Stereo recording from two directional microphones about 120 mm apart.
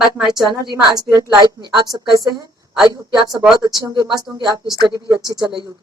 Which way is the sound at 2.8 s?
40° right (ahead or behind).